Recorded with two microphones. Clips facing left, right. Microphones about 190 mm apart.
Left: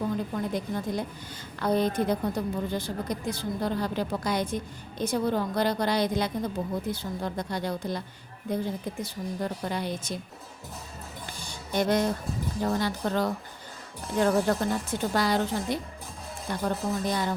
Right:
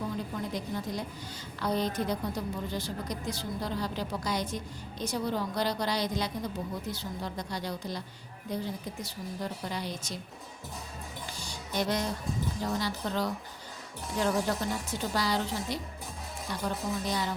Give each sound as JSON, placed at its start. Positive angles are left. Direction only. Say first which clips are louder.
{"t": 0.5, "sound": "a woman's voice", "louder": "left 4 dB", "side_deg": 55}
{"t": 11.3, "sound": "music", "louder": "left 5 dB", "side_deg": 55}
{"t": 12.6, "sound": "a woman's voice", "louder": "left 6 dB", "side_deg": 55}